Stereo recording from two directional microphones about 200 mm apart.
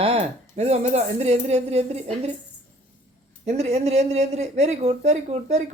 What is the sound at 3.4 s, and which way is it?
Speech, 35° right (ahead or behind).